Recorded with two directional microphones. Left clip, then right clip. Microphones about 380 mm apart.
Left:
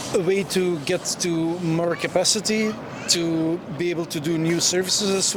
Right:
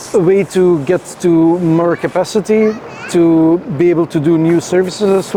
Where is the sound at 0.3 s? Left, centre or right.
Right.